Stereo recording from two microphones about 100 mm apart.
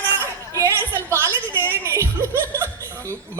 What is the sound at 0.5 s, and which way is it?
Music, 30° right (ahead or behind).